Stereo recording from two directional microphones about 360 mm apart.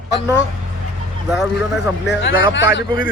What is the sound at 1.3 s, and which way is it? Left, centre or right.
Speech, centre.